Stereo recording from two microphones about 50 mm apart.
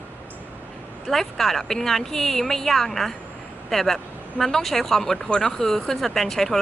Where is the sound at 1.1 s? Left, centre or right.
Centre.